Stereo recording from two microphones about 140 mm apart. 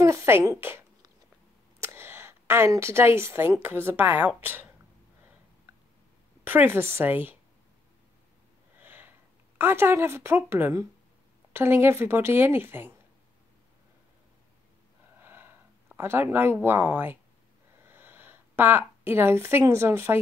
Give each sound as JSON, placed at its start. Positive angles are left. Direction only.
{"t": 0.0, "sound": "a woman's voice", "side_deg": -20}
{"t": 6.4, "sound": "a woman's voice", "side_deg": -15}
{"t": 8.7, "sound": "a sound", "side_deg": -15}
{"t": 9.6, "sound": "a woman's voice", "side_deg": -15}
{"t": 15.1, "sound": "a sound", "side_deg": -15}
{"t": 17.8, "sound": "a woman's voice", "side_deg": -15}